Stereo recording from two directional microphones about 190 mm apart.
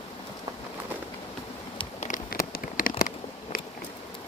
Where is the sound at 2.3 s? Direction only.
50° left (ahead or behind).